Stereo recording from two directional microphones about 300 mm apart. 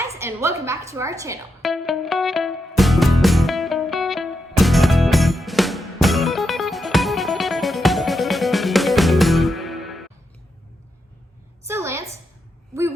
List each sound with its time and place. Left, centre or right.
0.2 s a woman's voice: centre
1.6 s music: centre
11.7 s a sound: centre